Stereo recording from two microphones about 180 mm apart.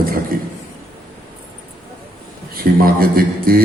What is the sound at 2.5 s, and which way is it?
Speech, 55° right (ahead or behind).